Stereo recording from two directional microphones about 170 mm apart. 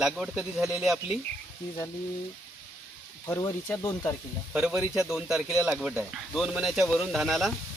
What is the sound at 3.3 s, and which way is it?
Speech, 15° left (ahead or behind).